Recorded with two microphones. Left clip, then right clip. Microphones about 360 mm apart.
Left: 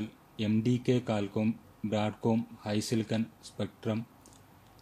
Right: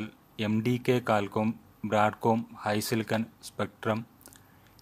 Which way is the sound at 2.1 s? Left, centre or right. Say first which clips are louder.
Right 5 dB; right.